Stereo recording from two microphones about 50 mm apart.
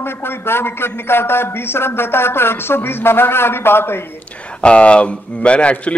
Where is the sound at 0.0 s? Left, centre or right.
Left.